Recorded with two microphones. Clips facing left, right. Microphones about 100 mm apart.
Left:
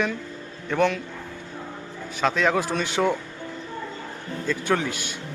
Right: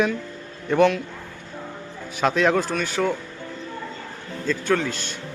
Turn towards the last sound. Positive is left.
turn(degrees=10)  # may be behind; listen again after turning